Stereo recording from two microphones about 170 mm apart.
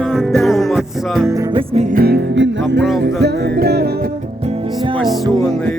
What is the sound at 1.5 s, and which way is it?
Music, 35° right (ahead or behind).